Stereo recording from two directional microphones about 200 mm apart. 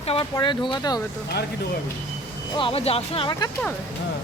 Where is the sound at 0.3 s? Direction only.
25° left (ahead or behind).